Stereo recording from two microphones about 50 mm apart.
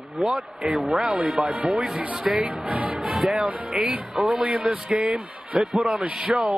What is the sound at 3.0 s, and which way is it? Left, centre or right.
Music, centre.